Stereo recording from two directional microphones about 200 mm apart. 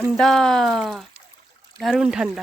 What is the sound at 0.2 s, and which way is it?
Speech, centre (ahead or behind).